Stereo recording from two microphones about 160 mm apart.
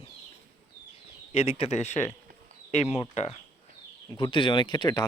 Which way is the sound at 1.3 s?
40° left (ahead or behind).